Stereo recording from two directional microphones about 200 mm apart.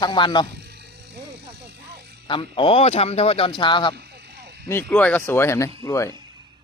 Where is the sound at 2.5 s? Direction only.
25° left (ahead or behind).